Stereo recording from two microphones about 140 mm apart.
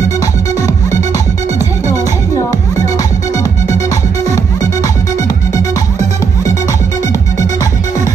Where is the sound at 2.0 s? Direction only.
25° left (ahead or behind).